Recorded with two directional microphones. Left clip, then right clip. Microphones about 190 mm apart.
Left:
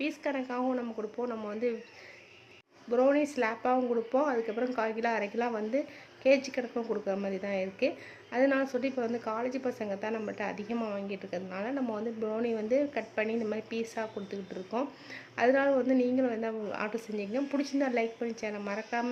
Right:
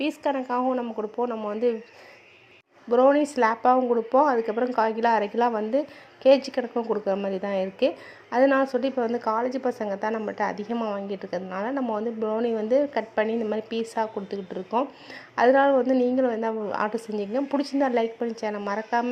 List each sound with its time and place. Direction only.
0.0 s speech: 20° right (ahead or behind)
2.9 s a woman's voice: 25° right (ahead or behind)